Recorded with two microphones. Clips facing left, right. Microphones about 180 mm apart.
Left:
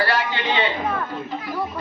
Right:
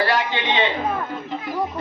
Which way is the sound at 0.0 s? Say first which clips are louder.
Right 1 dB; 20° right (ahead or behind).